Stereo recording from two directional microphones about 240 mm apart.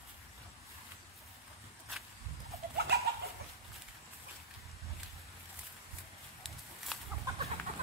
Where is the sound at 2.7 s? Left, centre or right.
Right.